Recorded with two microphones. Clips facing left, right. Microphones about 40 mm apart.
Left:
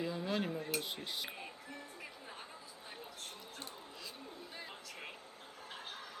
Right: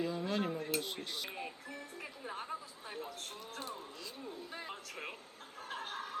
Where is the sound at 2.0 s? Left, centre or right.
Right.